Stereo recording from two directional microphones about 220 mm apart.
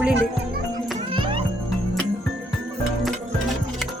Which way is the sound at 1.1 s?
25° right (ahead or behind).